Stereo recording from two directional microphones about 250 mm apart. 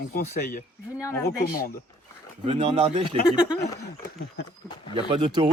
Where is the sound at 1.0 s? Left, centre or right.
Centre.